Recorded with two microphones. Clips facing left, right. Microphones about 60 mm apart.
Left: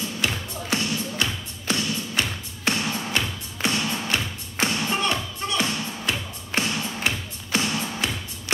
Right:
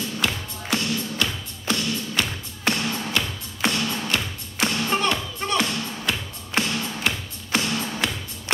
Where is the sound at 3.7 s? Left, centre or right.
Left.